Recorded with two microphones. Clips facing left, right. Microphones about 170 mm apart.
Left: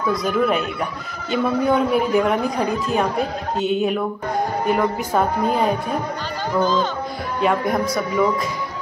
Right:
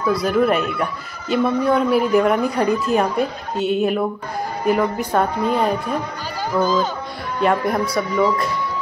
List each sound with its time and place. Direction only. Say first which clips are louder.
0.2 s speech: right 2 dB; centre (ahead or behind)
2.4 s a woman's voice: right 3 dB; 60° right (ahead or behind)
2.9 s speech: right 2 dB; centre (ahead or behind)